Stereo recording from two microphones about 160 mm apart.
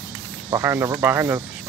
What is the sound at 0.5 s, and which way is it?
Speech, 15° right (ahead or behind).